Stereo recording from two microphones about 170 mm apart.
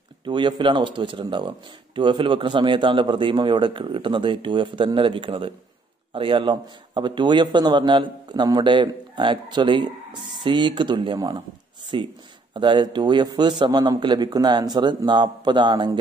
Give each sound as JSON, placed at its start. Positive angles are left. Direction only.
{"t": 0.2, "sound": "speech", "side_deg": -25}